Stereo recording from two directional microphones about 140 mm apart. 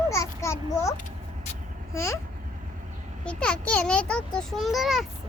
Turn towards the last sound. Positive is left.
turn(degrees=0)  # may be behind; listen again after turning